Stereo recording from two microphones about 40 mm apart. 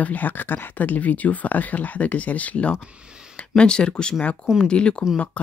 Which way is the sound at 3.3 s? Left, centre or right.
Left.